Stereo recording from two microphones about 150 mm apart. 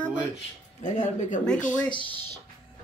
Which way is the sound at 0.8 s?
55° left (ahead or behind).